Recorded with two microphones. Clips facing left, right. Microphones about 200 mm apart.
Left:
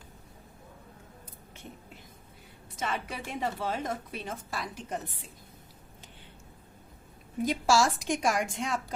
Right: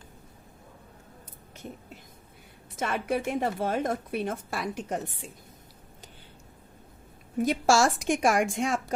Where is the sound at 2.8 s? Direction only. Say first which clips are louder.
Right 6 dB; 55° right (ahead or behind).